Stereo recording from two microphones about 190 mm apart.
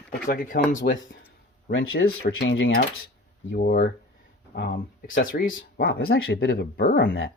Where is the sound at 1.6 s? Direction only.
80° left.